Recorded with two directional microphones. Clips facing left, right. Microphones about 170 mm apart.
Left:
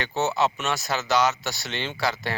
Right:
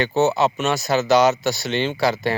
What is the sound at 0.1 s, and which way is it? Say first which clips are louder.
Speech: right 5 dB; 45° right (ahead or behind).